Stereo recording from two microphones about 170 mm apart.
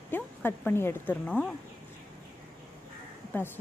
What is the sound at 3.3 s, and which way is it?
Speech, 10° left (ahead or behind).